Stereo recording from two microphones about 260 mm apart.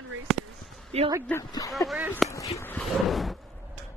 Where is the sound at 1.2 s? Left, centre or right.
Centre.